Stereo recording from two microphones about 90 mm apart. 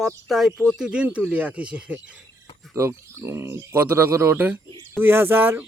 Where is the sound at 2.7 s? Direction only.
30° right (ahead or behind).